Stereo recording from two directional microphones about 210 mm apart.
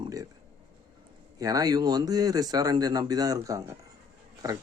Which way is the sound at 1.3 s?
15° right (ahead or behind).